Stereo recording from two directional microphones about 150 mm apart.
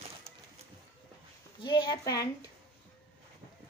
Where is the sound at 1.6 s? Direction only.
30° left (ahead or behind).